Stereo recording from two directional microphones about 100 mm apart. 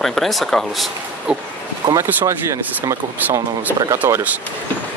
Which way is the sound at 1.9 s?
30° right (ahead or behind).